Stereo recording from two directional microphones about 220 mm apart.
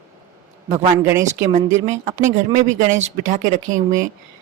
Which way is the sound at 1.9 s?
35° right (ahead or behind).